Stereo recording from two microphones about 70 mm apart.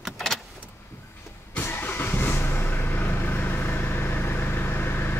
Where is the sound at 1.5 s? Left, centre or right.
Left.